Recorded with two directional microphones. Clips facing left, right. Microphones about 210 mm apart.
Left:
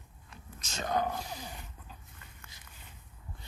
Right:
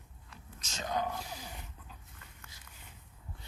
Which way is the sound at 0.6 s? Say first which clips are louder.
Left 3 dB; 55° left (ahead or behind).